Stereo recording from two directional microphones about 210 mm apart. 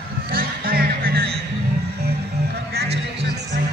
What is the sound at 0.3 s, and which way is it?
Music, 45° right (ahead or behind).